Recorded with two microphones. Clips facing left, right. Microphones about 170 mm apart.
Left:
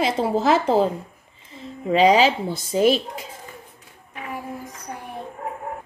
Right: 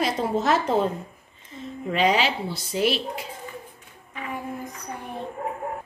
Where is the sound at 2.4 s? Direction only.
50° left (ahead or behind).